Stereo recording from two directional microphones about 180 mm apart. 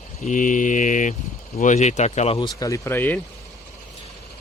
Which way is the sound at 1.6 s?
40° left (ahead or behind).